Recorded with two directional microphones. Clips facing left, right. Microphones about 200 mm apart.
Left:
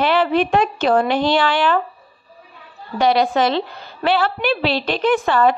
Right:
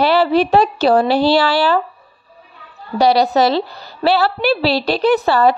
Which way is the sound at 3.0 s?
35° right (ahead or behind).